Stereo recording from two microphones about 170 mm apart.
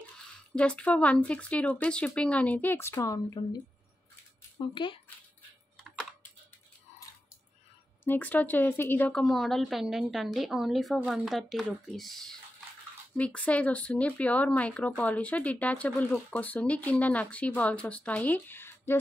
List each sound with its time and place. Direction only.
0.6 s speech: 5° left (ahead or behind)
4.7 s speech: 30° left (ahead or behind)
5.8 s computer keyboard: centre (ahead or behind)
8.0 s a woman's voice: 10° left (ahead or behind)